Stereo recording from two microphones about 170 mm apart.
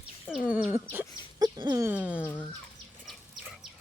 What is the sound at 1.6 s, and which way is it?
Chicken, 25° right (ahead or behind).